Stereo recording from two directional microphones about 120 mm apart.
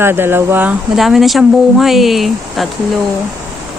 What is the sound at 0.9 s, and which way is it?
Speech, centre (ahead or behind).